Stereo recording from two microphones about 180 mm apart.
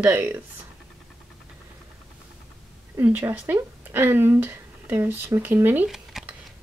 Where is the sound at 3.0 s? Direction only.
15° right (ahead or behind).